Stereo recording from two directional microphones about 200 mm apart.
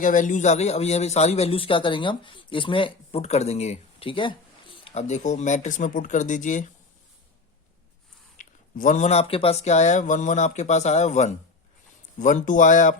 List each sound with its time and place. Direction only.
0.0 s a man's voice: 40° left (ahead or behind)
8.4 s a man's voice: 40° left (ahead or behind)